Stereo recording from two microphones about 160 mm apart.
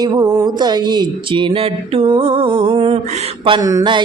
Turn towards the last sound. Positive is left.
turn(degrees=-30)  # may be behind; listen again after turning